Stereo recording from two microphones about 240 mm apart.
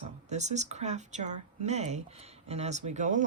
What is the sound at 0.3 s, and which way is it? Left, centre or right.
Speech, right.